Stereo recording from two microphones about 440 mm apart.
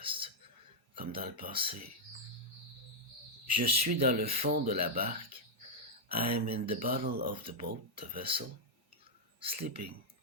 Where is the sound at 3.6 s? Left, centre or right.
Centre.